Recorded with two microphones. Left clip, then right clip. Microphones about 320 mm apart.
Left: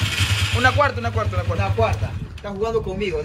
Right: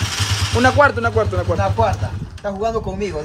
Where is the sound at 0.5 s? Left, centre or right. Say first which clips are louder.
Right 5 dB; right.